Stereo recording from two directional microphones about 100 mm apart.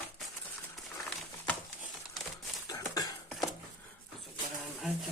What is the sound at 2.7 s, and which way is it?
Cough, 35° left (ahead or behind).